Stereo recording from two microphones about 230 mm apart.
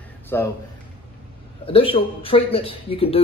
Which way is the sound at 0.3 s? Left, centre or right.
Centre.